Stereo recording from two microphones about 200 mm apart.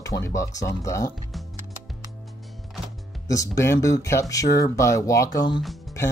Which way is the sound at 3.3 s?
15° left (ahead or behind).